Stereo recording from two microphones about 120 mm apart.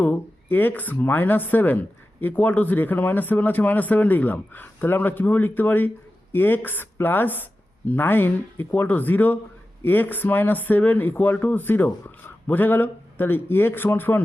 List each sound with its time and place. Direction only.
0.0 s speech: 15° left (ahead or behind)